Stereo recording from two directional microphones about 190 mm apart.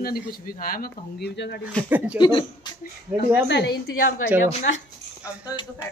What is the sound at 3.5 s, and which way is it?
Speech, 65° left (ahead or behind).